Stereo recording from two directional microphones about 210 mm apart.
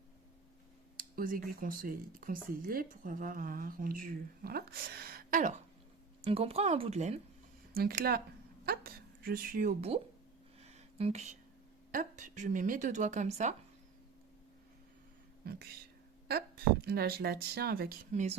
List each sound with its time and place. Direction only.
0.9 s speech: 40° right (ahead or behind)
6.2 s speech: 30° right (ahead or behind)
7.7 s a woman's voice: 45° right (ahead or behind)
10.6 s a sound: 30° right (ahead or behind)
11.9 s speech: 40° right (ahead or behind)
16.8 s speech: 50° right (ahead or behind)